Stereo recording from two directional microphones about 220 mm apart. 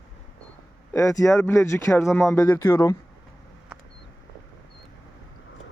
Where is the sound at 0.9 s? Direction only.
15° left (ahead or behind).